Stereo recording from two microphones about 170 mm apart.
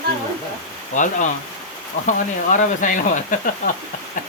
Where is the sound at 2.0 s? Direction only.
50° left (ahead or behind).